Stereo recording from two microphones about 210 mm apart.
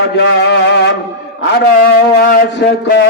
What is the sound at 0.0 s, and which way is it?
Music, 55° left (ahead or behind).